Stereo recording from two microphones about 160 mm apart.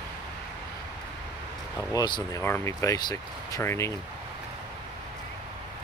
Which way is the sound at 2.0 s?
25° left (ahead or behind).